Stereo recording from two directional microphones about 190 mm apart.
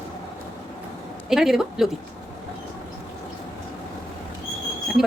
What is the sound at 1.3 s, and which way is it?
Speech, centre (ahead or behind).